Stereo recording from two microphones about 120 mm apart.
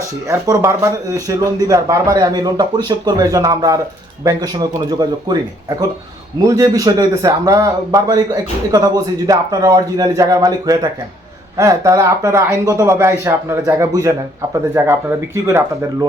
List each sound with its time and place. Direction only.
0.3 s a man's voice: 30° right (ahead or behind)